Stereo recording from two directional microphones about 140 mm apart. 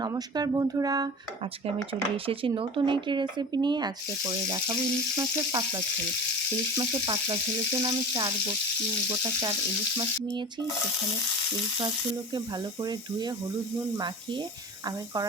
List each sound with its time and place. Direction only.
0.0 s speech: 30° right (ahead or behind)
2.1 s speech: 40° right (ahead or behind)
12.8 s speech: 30° right (ahead or behind)